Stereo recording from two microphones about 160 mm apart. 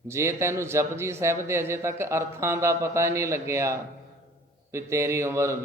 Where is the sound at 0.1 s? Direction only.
15° right (ahead or behind).